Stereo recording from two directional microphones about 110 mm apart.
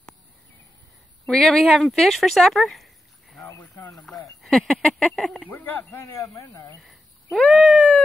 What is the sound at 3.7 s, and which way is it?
Speech, 30° left (ahead or behind).